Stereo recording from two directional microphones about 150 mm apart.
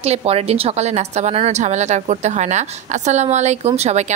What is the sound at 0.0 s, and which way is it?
A woman's voice, 45° right (ahead or behind).